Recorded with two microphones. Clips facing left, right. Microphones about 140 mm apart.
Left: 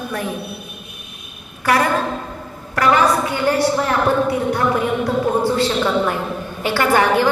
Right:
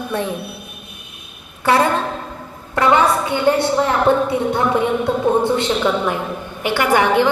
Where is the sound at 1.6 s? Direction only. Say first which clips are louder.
Right 1 dB; 25° right (ahead or behind).